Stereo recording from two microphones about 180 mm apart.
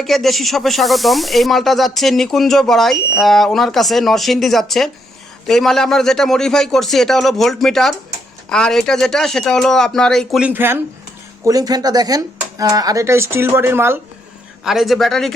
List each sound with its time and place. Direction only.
0.0 s speech: centre (ahead or behind)
14.6 s speech: centre (ahead or behind)